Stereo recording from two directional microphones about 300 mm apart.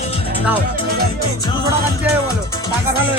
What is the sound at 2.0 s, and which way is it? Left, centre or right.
Speech, centre.